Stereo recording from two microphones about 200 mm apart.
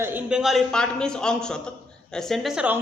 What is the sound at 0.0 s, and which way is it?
A man's voice, 10° right (ahead or behind).